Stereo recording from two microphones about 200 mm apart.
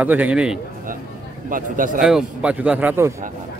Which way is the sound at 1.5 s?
40° right (ahead or behind).